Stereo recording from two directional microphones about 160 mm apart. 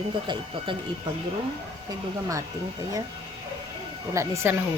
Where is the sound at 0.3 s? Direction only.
30° right (ahead or behind).